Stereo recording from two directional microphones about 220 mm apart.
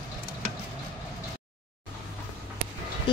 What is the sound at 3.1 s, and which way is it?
Music, 20° left (ahead or behind).